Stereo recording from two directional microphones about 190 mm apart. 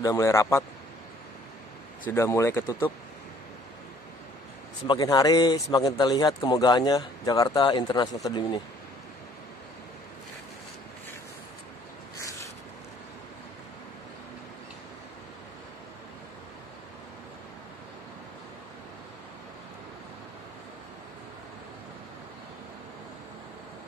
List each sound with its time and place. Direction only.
0.0 s speech: 15° left (ahead or behind)
2.0 s speech: 15° left (ahead or behind)
4.8 s a man's voice: 20° left (ahead or behind)
12.2 s a sound: 15° left (ahead or behind)